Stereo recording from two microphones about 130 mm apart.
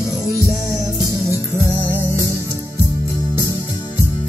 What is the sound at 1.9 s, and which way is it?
Music, 20° right (ahead or behind).